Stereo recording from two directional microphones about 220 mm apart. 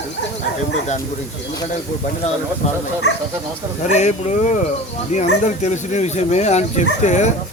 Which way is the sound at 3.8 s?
30° left (ahead or behind).